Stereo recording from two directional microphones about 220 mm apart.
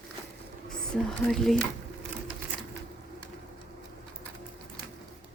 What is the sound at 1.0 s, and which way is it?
Speech, centre (ahead or behind).